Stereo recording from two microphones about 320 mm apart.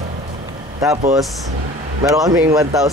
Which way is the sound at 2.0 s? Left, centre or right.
Centre.